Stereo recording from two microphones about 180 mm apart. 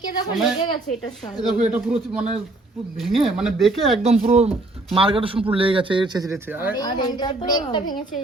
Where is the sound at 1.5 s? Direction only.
5° right (ahead or behind).